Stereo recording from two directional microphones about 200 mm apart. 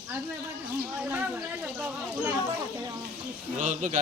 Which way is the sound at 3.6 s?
35° right (ahead or behind).